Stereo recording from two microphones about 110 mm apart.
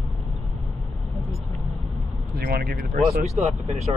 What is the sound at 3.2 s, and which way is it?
Speech, 80° right.